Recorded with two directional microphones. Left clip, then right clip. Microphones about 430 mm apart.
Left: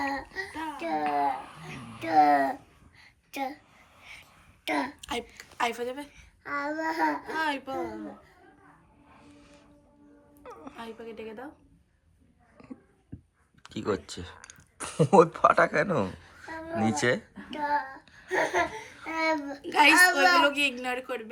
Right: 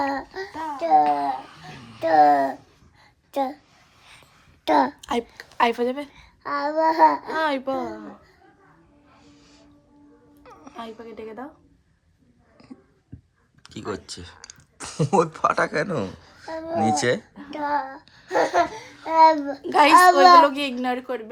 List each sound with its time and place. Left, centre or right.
0.1 s babbling: centre
2.0 s a child's voice: centre
2.2 s a sound: centre
4.6 s a child's voice: centre
4.9 s a child's voice: centre
9.1 s music: centre
10.8 s a child's voice: centre
13.6 s speech: centre
17.5 s a child's voice: centre